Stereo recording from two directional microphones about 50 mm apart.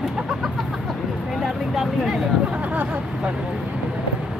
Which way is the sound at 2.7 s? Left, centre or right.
Right.